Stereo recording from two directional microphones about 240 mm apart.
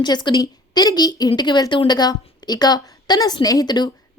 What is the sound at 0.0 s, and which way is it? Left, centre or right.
A woman's voice, centre.